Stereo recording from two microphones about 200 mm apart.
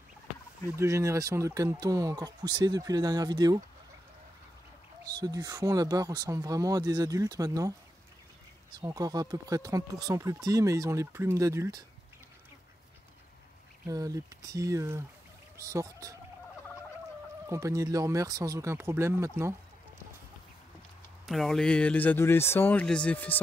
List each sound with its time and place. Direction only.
0.7 s speech: 15° right (ahead or behind)
5.0 s speech: 20° right (ahead or behind)
8.7 s speech: 15° right (ahead or behind)
13.8 s speech: 15° right (ahead or behind)
17.5 s speech: 15° right (ahead or behind)
21.3 s speech: centre (ahead or behind)